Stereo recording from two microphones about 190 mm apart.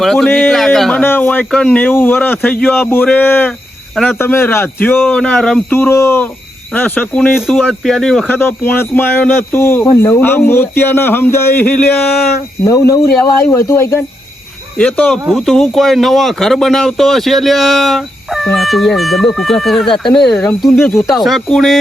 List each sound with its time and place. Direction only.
0.0 s speech: centre (ahead or behind)